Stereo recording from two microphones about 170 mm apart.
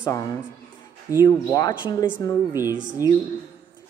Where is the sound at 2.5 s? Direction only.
15° right (ahead or behind).